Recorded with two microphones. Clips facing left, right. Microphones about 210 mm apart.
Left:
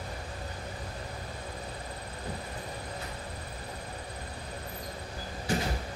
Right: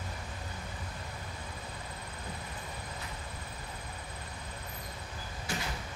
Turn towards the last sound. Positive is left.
turn(degrees=40)  # may be behind; listen again after turning